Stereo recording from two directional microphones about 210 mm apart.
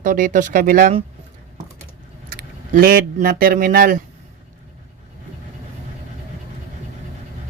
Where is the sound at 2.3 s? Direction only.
45° right (ahead or behind).